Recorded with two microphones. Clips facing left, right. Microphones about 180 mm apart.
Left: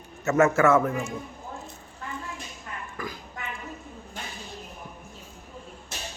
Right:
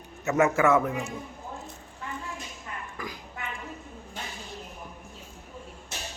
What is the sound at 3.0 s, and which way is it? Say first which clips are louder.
Speech: left 3 dB; 15° right (ahead or behind).